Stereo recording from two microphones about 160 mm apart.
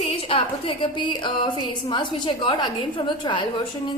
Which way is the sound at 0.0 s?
35° left (ahead or behind).